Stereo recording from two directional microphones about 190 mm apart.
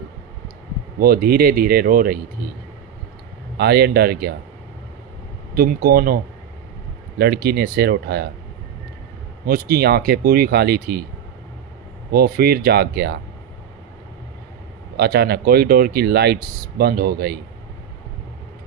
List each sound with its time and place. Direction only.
0.9 s speech: 50° right (ahead or behind)
3.6 s speech: 60° right (ahead or behind)
5.5 s speech: 50° right (ahead or behind)
7.2 s speech: 55° right (ahead or behind)
9.5 s speech: 50° right (ahead or behind)
12.1 s speech: 55° right (ahead or behind)
14.9 s speech: 55° right (ahead or behind)